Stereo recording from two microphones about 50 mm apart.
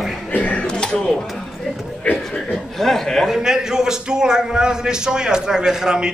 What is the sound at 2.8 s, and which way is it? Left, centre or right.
Chuckle, centre.